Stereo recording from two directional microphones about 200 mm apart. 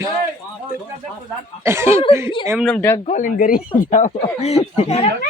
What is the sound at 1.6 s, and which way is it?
Speech, 10° right (ahead or behind).